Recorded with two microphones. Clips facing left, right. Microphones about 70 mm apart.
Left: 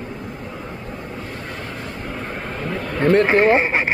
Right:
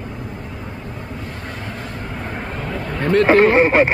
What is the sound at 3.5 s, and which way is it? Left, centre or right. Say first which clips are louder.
Speech: right 6 dB; centre.